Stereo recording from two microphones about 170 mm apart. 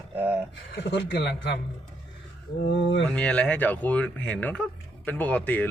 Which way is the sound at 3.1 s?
5° left (ahead or behind).